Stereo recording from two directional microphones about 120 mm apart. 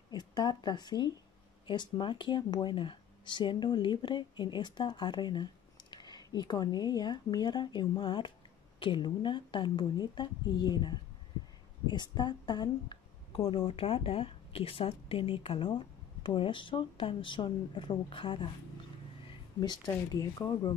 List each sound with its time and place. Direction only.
0.1 s a woman's voice: 35° left (ahead or behind)
19.2 s a sound: 35° left (ahead or behind)
19.9 s speech: 30° left (ahead or behind)